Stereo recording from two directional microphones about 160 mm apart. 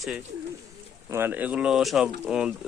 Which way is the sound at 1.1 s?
15° right (ahead or behind).